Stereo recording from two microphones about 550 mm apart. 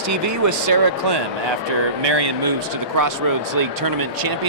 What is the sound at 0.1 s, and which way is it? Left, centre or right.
Speech, right.